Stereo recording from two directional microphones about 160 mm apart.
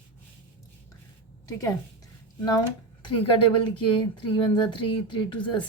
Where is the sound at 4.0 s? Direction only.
30° left (ahead or behind).